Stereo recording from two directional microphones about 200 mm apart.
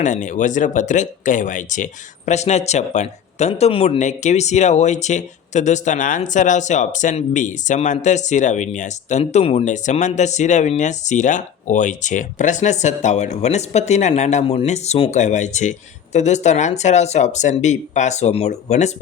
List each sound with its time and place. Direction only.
0.0 s speech: 40° left (ahead or behind)